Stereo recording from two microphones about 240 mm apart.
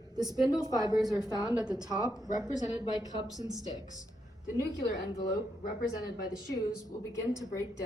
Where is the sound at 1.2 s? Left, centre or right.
Centre.